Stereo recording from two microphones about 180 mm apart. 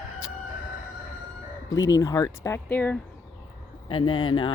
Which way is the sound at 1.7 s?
20° left (ahead or behind).